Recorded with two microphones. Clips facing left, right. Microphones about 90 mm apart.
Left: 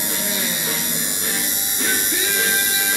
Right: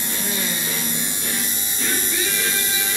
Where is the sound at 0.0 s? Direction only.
20° left (ahead or behind).